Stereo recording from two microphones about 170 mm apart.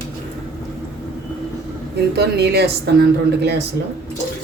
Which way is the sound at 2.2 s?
75° right (ahead or behind).